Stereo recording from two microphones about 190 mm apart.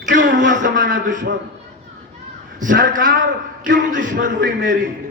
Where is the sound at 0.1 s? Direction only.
45° right (ahead or behind).